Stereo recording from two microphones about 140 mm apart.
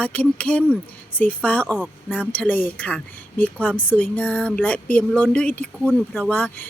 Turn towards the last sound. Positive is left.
turn(degrees=10)  # may be behind; listen again after turning